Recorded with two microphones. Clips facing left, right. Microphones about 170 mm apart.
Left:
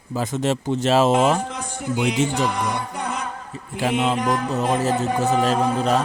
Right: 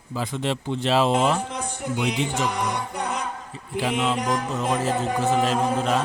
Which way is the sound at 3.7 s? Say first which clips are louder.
Left 3 dB; 40° left (ahead or behind).